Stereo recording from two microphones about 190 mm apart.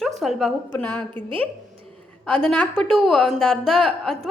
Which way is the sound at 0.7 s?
10° left (ahead or behind).